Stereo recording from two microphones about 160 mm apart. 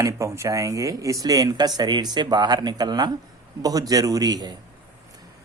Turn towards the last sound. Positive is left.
turn(degrees=-25)  # may be behind; listen again after turning